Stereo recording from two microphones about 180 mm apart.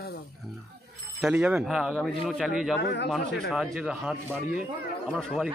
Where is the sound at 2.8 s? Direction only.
70° left (ahead or behind).